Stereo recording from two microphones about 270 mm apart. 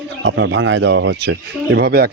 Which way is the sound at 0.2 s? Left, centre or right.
Right.